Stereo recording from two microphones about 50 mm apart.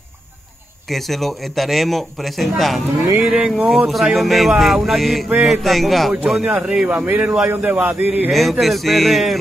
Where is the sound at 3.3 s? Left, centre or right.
Centre.